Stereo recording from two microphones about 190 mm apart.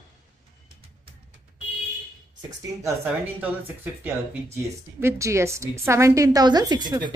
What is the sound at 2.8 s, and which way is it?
A woman's voice, 10° right (ahead or behind).